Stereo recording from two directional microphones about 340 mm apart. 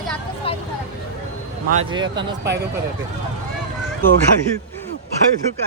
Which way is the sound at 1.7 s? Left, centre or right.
Centre.